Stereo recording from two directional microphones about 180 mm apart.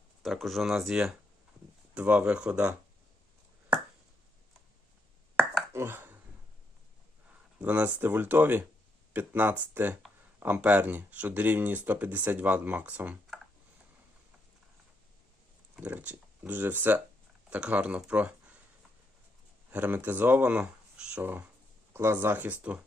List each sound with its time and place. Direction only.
0.2 s speech: centre (ahead or behind)
3.7 s a sound: 5° right (ahead or behind)
5.7 s a sound: 15° right (ahead or behind)
7.6 s speech: 10° right (ahead or behind)
15.7 s speech: 10° right (ahead or behind)
19.7 s speech: 10° right (ahead or behind)